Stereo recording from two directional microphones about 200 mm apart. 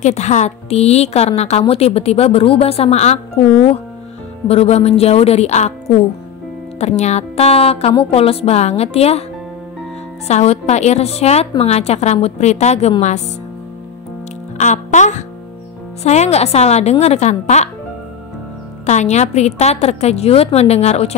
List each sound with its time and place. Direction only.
0.0 s a woman's voice: 35° left (ahead or behind)
4.5 s a woman's voice: 30° left (ahead or behind)
10.2 s a woman's voice: 35° left (ahead or behind)
14.6 s a woman's voice: 35° left (ahead or behind)
18.9 s a woman's voice: 35° left (ahead or behind)